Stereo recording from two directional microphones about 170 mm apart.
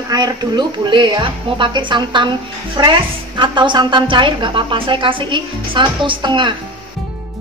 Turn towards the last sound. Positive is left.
turn(degrees=-30)  # may be behind; listen again after turning